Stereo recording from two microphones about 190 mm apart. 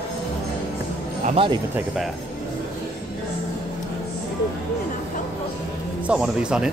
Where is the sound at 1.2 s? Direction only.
30° right (ahead or behind).